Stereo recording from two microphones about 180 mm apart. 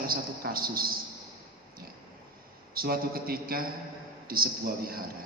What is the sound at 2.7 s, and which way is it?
A man's voice, 55° right (ahead or behind).